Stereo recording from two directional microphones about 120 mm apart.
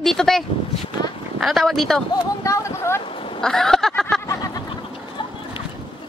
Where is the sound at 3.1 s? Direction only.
50° left (ahead or behind).